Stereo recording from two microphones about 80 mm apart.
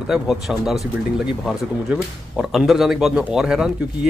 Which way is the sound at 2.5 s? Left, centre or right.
Centre.